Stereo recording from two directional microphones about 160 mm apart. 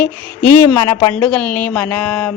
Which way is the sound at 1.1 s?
10° left (ahead or behind).